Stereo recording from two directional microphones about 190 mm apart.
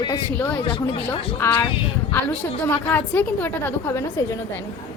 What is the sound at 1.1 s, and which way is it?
Speech, 30° left (ahead or behind).